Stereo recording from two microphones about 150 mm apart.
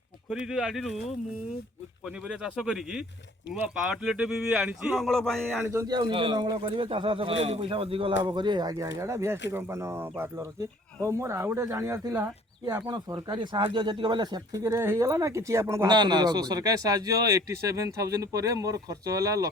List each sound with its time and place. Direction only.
0.3 s speech: 5° right (ahead or behind)
2.0 s speech: 5° right (ahead or behind)
4.0 s speech: 5° right (ahead or behind)
5.6 s a man's voice: 25° right (ahead or behind)
15.9 s a man's voice: 30° right (ahead or behind)